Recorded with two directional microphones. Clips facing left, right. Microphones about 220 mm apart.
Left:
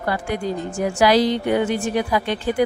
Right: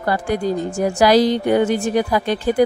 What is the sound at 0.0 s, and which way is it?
Speech, 40° right (ahead or behind).